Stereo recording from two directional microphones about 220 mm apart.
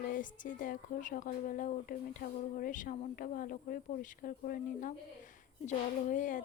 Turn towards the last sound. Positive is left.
turn(degrees=35)  # may be behind; listen again after turning